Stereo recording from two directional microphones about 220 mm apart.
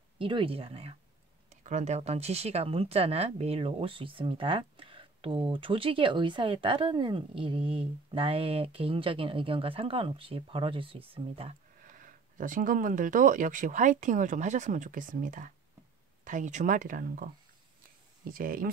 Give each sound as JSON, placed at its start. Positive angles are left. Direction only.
{"t": 0.2, "sound": "speech", "side_deg": -25}
{"t": 11.8, "sound": "speech", "side_deg": -35}